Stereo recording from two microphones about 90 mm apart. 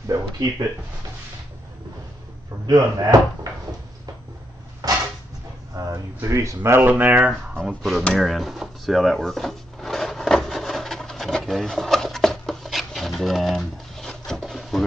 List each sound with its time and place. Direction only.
0.1 s speech: 45° right (ahead or behind)
2.6 s speech: 45° right (ahead or behind)
4.8 s a sound: 45° right (ahead or behind)
5.8 s speech: 35° right (ahead or behind)
6.9 s speech: 15° right (ahead or behind)
7.6 s speech: centre (ahead or behind)
8.0 s drawer open or close: 5° left (ahead or behind)